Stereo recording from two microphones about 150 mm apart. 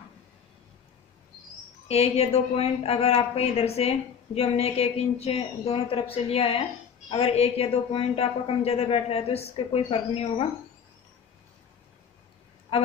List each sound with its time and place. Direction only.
1.9 s a woman's voice: 45° left (ahead or behind)